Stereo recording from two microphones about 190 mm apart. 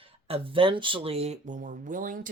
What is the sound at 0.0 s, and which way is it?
Speech, 30° right (ahead or behind).